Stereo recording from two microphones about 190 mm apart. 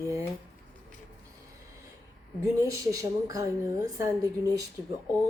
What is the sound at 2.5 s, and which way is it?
A woman's voice, 15° right (ahead or behind).